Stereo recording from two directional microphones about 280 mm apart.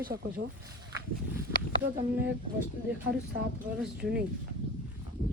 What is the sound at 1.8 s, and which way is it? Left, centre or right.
Speech, right.